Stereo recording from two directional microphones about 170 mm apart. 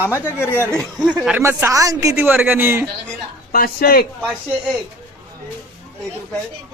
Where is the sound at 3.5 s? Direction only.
60° left (ahead or behind).